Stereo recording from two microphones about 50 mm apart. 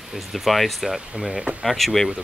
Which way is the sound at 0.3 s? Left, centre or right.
Centre.